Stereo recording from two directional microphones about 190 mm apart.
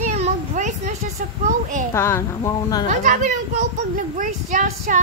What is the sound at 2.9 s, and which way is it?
A child's voice, 40° right (ahead or behind).